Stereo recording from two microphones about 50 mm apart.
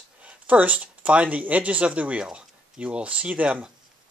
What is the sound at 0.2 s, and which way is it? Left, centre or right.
Speech, right.